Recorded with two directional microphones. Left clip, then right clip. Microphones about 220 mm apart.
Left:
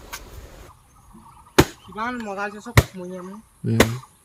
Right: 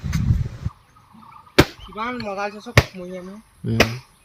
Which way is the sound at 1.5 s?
5° left (ahead or behind).